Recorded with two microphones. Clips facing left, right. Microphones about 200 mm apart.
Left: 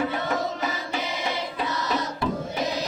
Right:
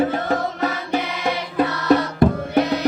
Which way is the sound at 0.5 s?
65° right (ahead or behind).